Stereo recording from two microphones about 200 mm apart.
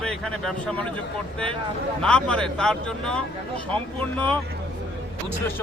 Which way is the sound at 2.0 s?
5° left (ahead or behind).